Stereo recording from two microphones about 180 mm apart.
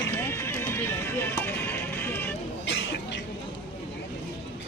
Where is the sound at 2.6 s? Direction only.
80° left.